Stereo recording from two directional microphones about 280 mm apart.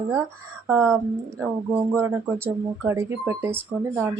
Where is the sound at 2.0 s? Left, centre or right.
Centre.